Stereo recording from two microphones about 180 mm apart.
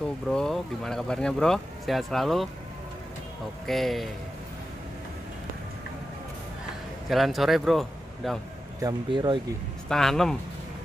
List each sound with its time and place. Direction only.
0.3 s speech: 5° left (ahead or behind)
3.6 s speech: centre (ahead or behind)
7.1 s a man's voice: centre (ahead or behind)
8.8 s speech: 25° right (ahead or behind)
9.8 s speech: centre (ahead or behind)